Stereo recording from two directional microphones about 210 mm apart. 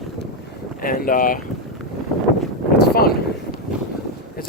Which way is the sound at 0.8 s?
45° left (ahead or behind).